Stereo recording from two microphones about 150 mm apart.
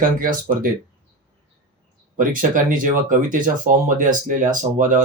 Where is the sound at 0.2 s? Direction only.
65° right (ahead or behind).